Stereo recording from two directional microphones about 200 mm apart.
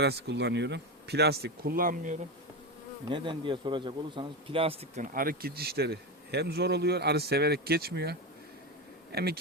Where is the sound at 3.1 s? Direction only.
25° right (ahead or behind).